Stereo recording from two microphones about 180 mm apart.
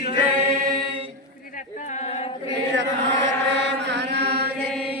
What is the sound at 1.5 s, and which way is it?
Singing, 45° left (ahead or behind).